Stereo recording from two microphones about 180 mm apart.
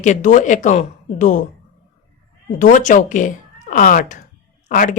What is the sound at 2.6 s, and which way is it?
Speech, 45° left (ahead or behind).